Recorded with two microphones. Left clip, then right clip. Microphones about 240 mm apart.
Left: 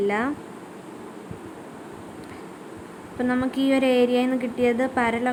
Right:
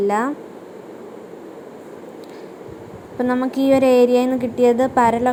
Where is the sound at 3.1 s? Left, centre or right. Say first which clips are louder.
Right 5 dB; centre.